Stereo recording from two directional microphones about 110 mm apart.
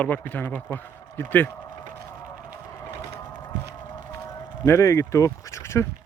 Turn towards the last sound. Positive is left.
turn(degrees=25)  # may be behind; listen again after turning